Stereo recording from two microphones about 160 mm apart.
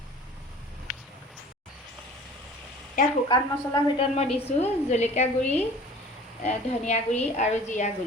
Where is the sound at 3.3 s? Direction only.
30° left (ahead or behind); by 7.9 s 50° left (ahead or behind).